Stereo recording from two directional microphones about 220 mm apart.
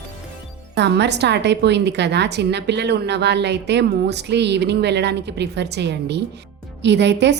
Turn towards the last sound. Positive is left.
turn(degrees=-50)  # may be behind; listen again after turning